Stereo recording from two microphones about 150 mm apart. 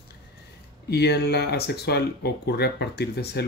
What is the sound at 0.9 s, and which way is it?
Speech, 90° left.